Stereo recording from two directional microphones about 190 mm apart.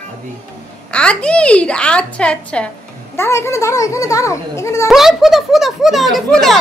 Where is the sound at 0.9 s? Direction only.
5° left (ahead or behind).